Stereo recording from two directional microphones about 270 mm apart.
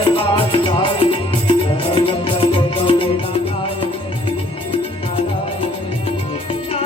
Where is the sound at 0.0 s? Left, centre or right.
Centre.